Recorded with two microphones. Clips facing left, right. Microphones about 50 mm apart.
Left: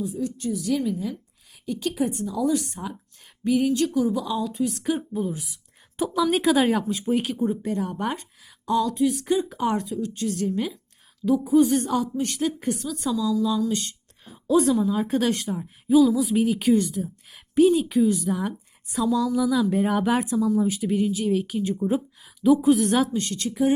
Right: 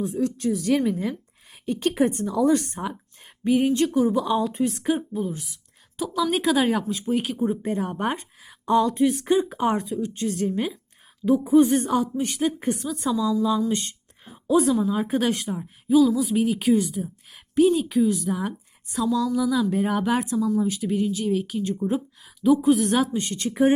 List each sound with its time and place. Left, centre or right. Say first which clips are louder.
0.0 s speech: right 4 dB; right
0.6 s speech: right 2 dB; right
3.4 s speech: right 1 dB; right
4.8 s speech: right 2 dB; centre
5.1 s a woman's voice: even; centre
7.4 s a woman's voice: right 1 dB; right
13.6 s a sound: right 1 dB; right
14.4 s a woman's voice: even; centre
23.1 s a woman's voice: even; right